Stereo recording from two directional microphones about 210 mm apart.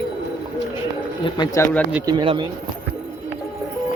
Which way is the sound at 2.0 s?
20° right (ahead or behind).